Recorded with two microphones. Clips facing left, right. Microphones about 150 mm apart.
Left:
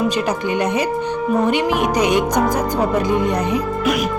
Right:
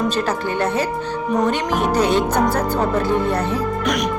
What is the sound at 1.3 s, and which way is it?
Speech, 10° left (ahead or behind).